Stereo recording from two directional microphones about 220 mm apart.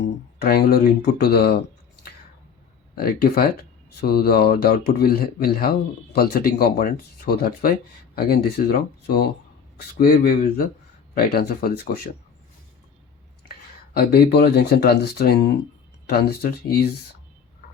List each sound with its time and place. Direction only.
0.0 s speech: 45° left (ahead or behind)
3.0 s speech: 45° left (ahead or behind)
13.9 s speech: 45° left (ahead or behind)